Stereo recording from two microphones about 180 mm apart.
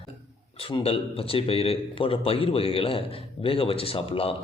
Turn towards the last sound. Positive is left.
turn(degrees=30)  # may be behind; listen again after turning